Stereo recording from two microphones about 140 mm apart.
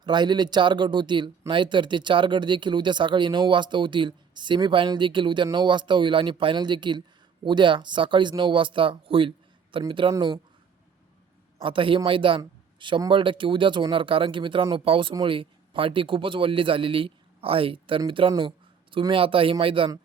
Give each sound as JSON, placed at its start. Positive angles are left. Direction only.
{"t": 0.0, "sound": "speech", "side_deg": -30}
{"t": 11.6, "sound": "speech", "side_deg": -40}
{"t": 12.4, "sound": "a sound", "side_deg": -35}
{"t": 13.1, "sound": "a man's voice", "side_deg": -35}